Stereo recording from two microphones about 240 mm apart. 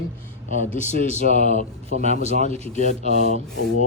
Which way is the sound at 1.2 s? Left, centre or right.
Right.